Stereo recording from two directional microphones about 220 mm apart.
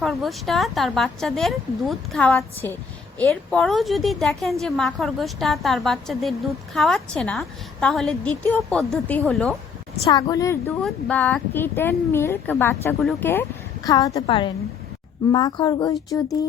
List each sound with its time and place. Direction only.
0.0 s a woman's voice: centre (ahead or behind)
10.1 s a woman's voice: 15° left (ahead or behind)